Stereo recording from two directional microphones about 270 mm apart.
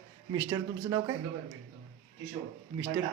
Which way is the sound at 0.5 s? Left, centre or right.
Centre.